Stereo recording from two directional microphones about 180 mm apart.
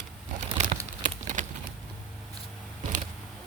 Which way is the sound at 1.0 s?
45° right (ahead or behind).